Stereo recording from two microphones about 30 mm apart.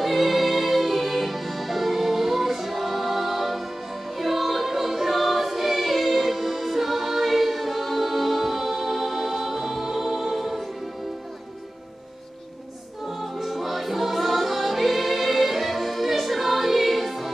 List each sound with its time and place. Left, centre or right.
0.0 s music: centre
13.2 s music: centre